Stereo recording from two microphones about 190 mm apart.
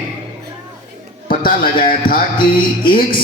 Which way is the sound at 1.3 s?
45° left (ahead or behind).